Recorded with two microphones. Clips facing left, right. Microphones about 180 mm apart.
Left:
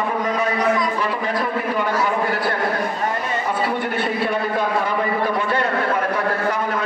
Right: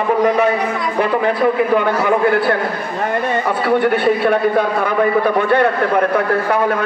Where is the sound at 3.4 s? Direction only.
60° right (ahead or behind).